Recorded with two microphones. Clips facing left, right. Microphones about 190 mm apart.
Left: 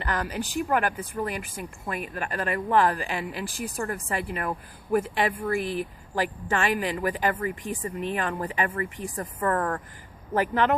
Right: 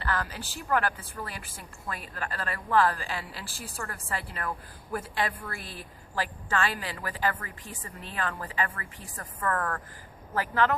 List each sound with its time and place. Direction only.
0.0 s speech: 15° left (ahead or behind)